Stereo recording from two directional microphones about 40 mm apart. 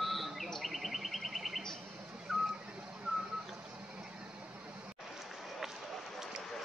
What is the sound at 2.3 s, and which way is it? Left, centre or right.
Vehicle, centre.